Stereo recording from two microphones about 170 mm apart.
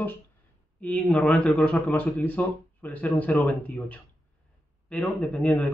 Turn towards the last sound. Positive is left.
turn(degrees=5)  # may be behind; listen again after turning